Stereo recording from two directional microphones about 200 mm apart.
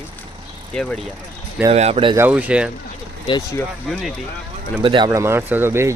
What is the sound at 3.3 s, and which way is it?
Speech, 25° left (ahead or behind).